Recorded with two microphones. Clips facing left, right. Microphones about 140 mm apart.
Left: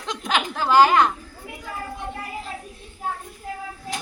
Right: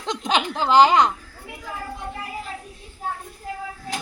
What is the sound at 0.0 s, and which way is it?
A woman's voice, 20° right (ahead or behind).